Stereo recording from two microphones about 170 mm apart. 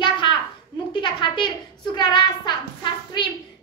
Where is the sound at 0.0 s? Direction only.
30° left (ahead or behind).